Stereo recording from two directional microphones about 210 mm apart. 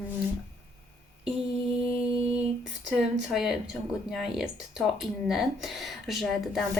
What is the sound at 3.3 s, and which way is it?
Speech, centre (ahead or behind).